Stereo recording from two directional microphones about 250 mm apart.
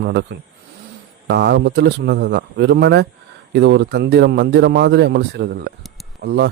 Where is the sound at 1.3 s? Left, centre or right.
Right.